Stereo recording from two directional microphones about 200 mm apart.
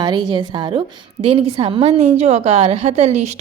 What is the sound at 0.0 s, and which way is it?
A woman's voice, 20° right (ahead or behind).